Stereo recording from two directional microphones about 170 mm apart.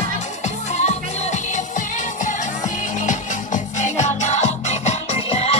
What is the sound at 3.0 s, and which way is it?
Music, 45° left (ahead or behind).